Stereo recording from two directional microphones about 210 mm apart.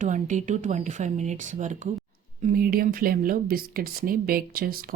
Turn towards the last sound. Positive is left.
turn(degrees=-45)  # may be behind; listen again after turning